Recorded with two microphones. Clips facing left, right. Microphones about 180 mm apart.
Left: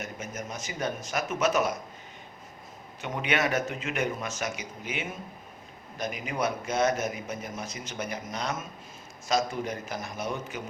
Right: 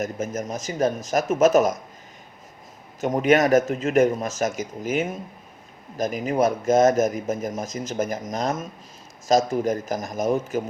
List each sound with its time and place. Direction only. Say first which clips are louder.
0.0 s speech: right 10 dB; 40° right (ahead or behind)
3.0 s speech: right 10 dB; 45° right (ahead or behind)